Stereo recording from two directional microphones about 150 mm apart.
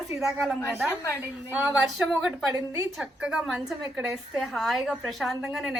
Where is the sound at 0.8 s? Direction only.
15° left (ahead or behind).